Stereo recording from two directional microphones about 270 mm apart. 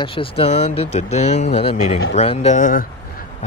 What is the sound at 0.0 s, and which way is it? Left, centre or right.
Speech, centre.